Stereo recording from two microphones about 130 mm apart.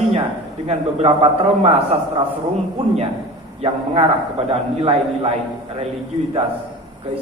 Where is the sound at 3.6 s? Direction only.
50° right (ahead or behind).